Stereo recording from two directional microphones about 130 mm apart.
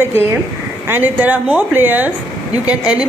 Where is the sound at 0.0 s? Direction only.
15° right (ahead or behind).